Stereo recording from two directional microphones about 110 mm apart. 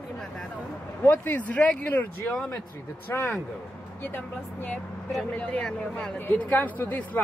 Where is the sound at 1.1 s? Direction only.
15° left (ahead or behind).